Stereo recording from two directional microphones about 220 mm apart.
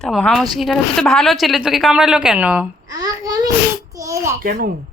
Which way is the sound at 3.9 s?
15° right (ahead or behind).